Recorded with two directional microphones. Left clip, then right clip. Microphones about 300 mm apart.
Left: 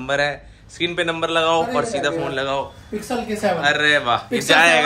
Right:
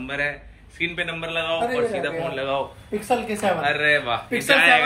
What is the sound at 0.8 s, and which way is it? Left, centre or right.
Speech, left.